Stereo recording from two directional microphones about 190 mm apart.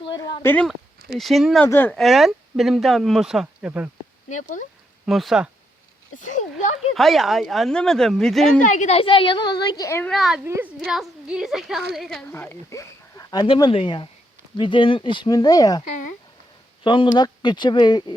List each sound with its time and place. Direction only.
0.1 s a sound: 25° left (ahead or behind)
0.4 s speech: 5° left (ahead or behind)
1.6 s speech: 10° left (ahead or behind); by 3.8 s 10° right (ahead or behind)
4.3 s speech: 40° left (ahead or behind)
5.0 s speech: centre (ahead or behind)
6.1 s speech: 40° left (ahead or behind)
6.9 s speech: centre (ahead or behind)
8.6 s speech: 40° left (ahead or behind); by 10.1 s 15° left (ahead or behind)
10.1 s speech: centre (ahead or behind)
10.4 s a woman's voice: 10° right (ahead or behind); by 15.8 s 20° left (ahead or behind)
16.8 s speech: 25° left (ahead or behind)